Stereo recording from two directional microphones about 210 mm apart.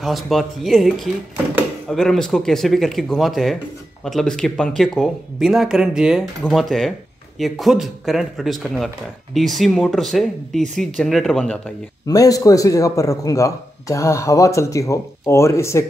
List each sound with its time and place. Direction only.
0.0 s speech: centre (ahead or behind)
12.1 s speech: 15° left (ahead or behind)